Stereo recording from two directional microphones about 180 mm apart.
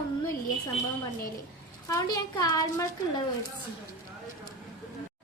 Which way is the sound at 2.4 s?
20° left (ahead or behind).